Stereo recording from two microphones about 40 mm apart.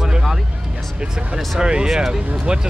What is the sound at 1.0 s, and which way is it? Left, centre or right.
Speech, right.